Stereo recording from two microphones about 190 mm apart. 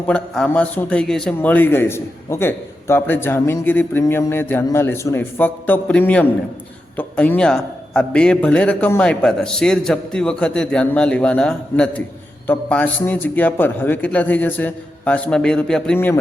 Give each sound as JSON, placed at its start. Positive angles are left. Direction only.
{"t": 0.1, "sound": "a man's voice", "side_deg": 5}